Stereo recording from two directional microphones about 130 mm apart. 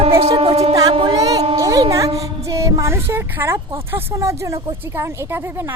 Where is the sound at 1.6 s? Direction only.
25° right (ahead or behind).